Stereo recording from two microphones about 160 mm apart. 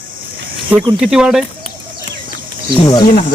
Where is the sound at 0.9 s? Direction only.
5° right (ahead or behind).